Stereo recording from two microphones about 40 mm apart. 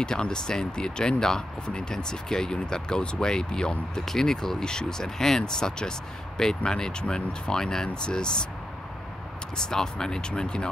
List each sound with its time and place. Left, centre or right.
0.0 s speech: left
9.7 s speech: centre